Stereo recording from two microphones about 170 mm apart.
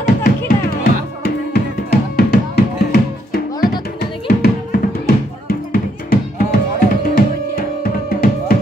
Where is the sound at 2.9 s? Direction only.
65° left (ahead or behind).